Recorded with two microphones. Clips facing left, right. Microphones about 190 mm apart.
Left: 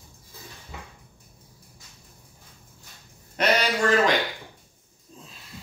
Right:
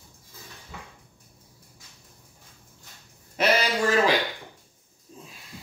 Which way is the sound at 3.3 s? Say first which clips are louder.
Even; 5° right (ahead or behind).